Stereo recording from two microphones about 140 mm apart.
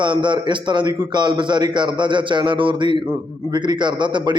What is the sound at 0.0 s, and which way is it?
A man's voice, 35° right (ahead or behind).